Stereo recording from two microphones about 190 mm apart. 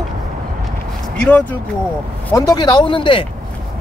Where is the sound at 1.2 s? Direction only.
5° left (ahead or behind).